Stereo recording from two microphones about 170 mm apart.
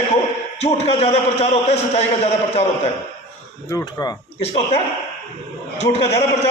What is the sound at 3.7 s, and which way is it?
Speech, 20° left (ahead or behind).